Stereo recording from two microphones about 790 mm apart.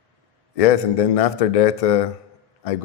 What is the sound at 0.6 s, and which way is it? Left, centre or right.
A man's voice, left.